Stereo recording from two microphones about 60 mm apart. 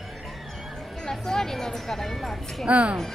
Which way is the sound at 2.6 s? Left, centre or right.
Centre.